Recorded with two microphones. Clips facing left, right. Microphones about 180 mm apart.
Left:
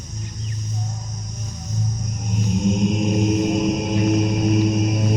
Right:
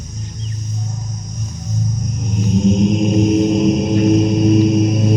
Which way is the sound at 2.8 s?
20° right (ahead or behind).